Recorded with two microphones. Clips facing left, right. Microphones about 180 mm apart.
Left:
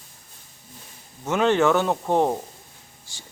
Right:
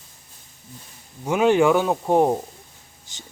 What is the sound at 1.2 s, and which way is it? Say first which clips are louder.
Speech: right 2 dB; 10° right (ahead or behind).